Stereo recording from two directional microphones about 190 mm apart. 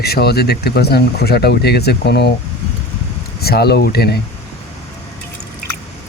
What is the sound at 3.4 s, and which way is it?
Speech, 55° left (ahead or behind).